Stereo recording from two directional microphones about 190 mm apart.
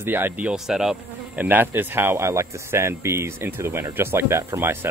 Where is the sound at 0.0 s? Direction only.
10° right (ahead or behind).